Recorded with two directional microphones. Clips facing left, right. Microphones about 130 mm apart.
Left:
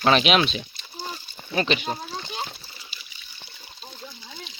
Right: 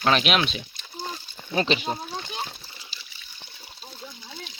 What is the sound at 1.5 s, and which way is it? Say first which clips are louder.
Speech: even; 25° right (ahead or behind).